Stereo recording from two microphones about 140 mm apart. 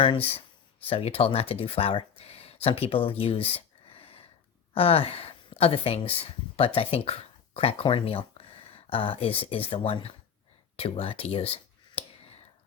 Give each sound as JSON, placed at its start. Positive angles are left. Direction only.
{"t": 0.0, "sound": "speech", "side_deg": 40}
{"t": 3.9, "sound": "a sound", "side_deg": 40}
{"t": 4.7, "sound": "a woman's voice", "side_deg": 45}